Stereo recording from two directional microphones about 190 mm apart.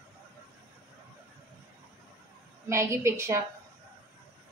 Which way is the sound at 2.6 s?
15° right (ahead or behind).